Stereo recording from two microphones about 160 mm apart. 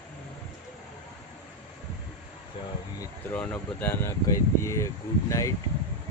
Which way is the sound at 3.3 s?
10° left (ahead or behind).